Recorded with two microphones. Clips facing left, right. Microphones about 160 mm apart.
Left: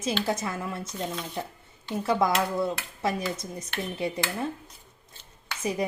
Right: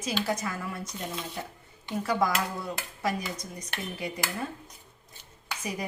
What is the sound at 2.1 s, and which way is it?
A woman's voice, 25° left (ahead or behind).